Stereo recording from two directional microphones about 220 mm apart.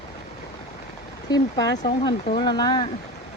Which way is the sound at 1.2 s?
20° left (ahead or behind).